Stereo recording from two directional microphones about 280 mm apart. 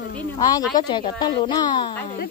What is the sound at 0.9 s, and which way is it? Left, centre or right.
Speech, centre.